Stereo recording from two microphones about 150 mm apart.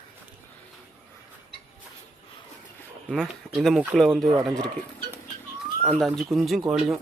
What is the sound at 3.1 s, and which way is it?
Speech, centre (ahead or behind).